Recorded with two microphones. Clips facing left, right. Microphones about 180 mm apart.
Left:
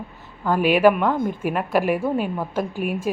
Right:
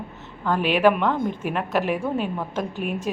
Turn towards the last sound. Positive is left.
turn(degrees=5)  # may be behind; listen again after turning